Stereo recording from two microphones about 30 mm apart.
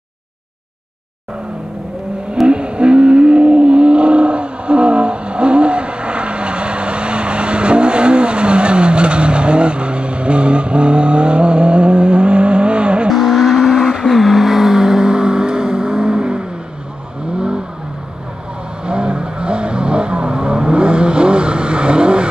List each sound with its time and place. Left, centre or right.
2.4 s a sound: right
13.1 s vehicle: centre
14.0 s vehicle: centre; by 16.4 s right
18.9 s vehicle: right